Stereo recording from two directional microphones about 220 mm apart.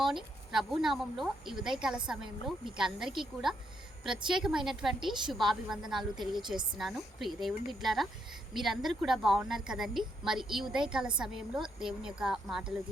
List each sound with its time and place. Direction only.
0.0 s a woman's voice: centre (ahead or behind)
6.1 s a woman's voice: 20° right (ahead or behind)
6.7 s a woman's voice: centre (ahead or behind)